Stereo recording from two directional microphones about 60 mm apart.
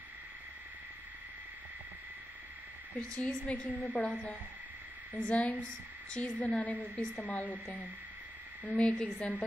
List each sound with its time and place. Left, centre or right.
3.4 s a woman's voice: centre
8.6 s a woman's voice: left